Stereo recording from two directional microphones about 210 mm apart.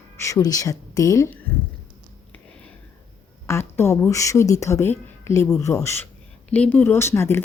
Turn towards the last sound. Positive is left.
turn(degrees=10)  # may be behind; listen again after turning